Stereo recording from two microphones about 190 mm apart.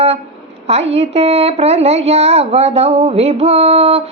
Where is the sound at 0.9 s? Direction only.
35° right (ahead or behind).